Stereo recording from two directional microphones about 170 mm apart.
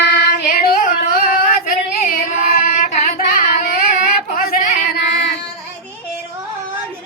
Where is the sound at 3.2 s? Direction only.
60° left (ahead or behind).